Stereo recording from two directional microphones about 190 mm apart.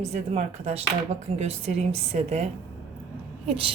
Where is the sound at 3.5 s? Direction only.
30° right (ahead or behind).